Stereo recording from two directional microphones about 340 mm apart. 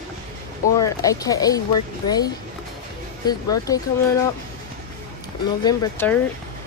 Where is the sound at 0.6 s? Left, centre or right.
Centre.